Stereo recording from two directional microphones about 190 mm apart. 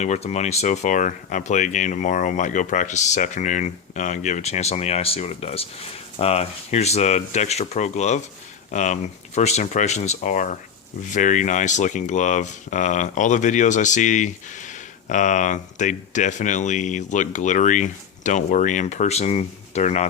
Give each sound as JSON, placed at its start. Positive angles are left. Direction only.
{"t": 0.0, "sound": "speech", "side_deg": 35}